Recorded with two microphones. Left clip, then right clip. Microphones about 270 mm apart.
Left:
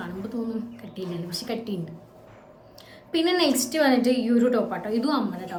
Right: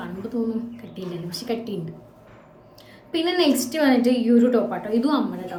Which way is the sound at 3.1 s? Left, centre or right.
Centre.